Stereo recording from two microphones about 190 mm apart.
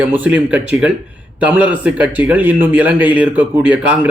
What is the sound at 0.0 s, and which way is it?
Speech, 10° right (ahead or behind).